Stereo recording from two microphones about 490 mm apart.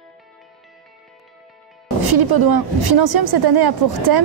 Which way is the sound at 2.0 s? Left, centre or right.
Right.